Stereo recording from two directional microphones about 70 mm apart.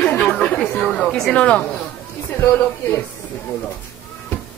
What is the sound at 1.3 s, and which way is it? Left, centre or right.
Speech, centre.